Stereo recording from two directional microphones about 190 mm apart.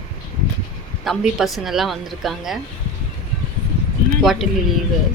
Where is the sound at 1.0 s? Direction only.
Centre (ahead or behind).